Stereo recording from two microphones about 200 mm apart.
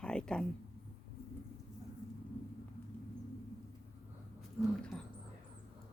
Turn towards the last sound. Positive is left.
turn(degrees=0)  # may be behind; listen again after turning